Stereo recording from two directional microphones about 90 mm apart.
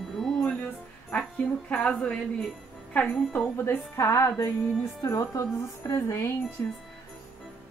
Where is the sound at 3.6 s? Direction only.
35° left (ahead or behind).